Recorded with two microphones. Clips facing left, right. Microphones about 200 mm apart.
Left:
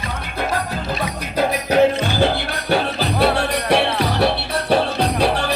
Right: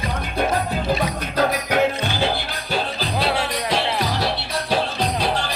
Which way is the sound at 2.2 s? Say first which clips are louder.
Left 4 dB; 65° left (ahead or behind).